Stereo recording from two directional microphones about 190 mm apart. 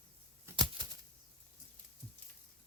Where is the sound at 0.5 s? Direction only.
20° right (ahead or behind).